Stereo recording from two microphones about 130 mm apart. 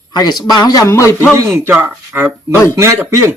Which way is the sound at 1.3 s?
25° right (ahead or behind).